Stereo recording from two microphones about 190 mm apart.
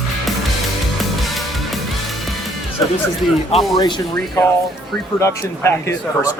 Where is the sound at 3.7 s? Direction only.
20° left (ahead or behind).